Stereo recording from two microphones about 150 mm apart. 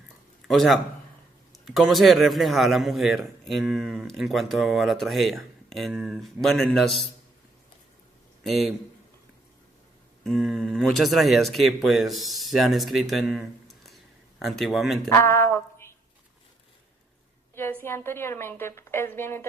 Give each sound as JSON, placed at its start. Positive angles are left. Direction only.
{"t": 0.4, "sound": "a man's voice", "side_deg": 0}
{"t": 8.4, "sound": "a man's voice", "side_deg": 0}
{"t": 10.2, "sound": "a man's voice", "side_deg": 0}
{"t": 13.8, "sound": "a sound", "side_deg": 0}
{"t": 15.1, "sound": "a sound", "side_deg": 15}
{"t": 17.5, "sound": "a woman's voice", "side_deg": 15}